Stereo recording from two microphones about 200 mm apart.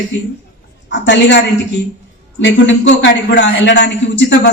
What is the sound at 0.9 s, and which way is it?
Speech, 60° left (ahead or behind).